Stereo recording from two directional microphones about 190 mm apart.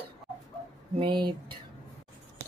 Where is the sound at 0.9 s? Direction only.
25° right (ahead or behind).